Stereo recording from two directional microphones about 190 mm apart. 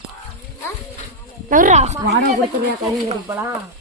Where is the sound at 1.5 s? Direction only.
40° right (ahead or behind).